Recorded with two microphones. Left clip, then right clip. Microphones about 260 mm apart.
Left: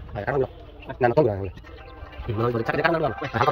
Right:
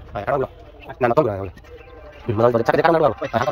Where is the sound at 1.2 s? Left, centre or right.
Right.